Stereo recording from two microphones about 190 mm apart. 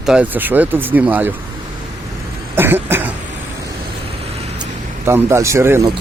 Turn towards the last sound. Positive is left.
turn(degrees=-15)  # may be behind; listen again after turning